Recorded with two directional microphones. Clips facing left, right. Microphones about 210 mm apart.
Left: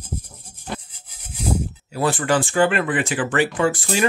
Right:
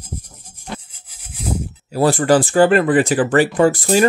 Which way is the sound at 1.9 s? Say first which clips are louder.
Right 6 dB; 40° right (ahead or behind).